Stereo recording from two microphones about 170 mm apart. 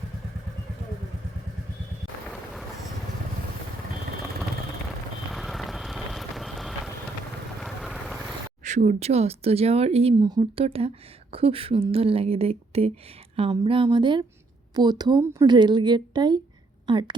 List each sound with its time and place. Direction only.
5.3 s vehicle: centre (ahead or behind)
8.6 s a woman's voice: 45° right (ahead or behind); by 17.2 s 25° right (ahead or behind)